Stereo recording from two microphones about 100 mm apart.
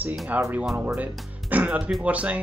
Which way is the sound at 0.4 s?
20° right (ahead or behind).